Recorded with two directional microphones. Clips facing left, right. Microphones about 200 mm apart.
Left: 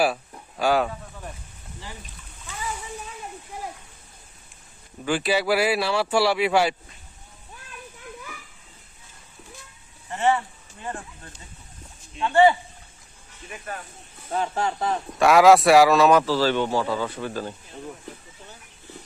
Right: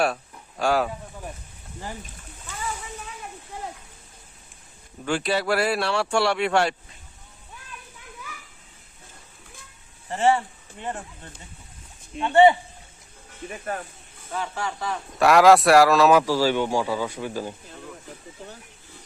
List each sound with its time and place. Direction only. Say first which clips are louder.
0.0 s speech: left 1 dB; 5° left (ahead or behind)
5.0 s speech: left 1 dB; 5° left (ahead or behind)
10.1 s speech: right 2 dB; 30° right (ahead or behind)
13.5 s speech: right 4 dB; 40° right (ahead or behind)
14.5 s speech: left 4 dB; 45° left (ahead or behind)
15.2 s speech: even; centre (ahead or behind)